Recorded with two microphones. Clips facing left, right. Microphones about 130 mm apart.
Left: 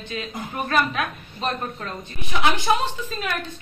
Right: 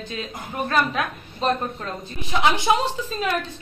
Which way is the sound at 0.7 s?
30° right (ahead or behind).